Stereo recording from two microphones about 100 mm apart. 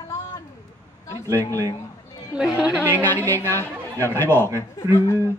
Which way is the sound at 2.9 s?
20° left (ahead or behind).